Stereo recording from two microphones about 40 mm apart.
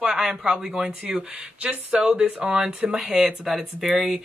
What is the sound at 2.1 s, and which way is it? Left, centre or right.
Speech, right.